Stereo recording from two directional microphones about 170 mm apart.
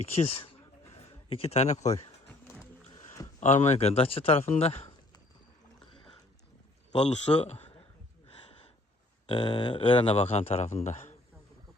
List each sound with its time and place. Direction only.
0.2 s speech: 35° left (ahead or behind)
0.9 s a sound: 35° left (ahead or behind)
3.4 s speech: 40° left (ahead or behind)
7.0 s speech: 40° left (ahead or behind)
9.2 s speech: 30° left (ahead or behind)